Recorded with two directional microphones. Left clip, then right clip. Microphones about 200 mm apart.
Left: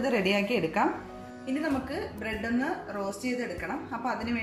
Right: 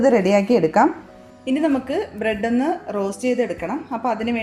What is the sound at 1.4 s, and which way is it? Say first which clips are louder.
A woman's voice: right 10 dB; 45° right (ahead or behind).